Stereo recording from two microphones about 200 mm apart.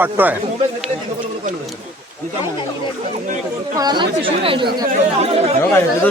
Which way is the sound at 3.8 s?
20° right (ahead or behind).